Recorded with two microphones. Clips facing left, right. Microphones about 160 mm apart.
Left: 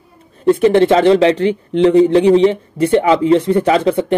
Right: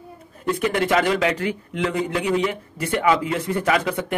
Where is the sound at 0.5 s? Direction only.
30° left (ahead or behind).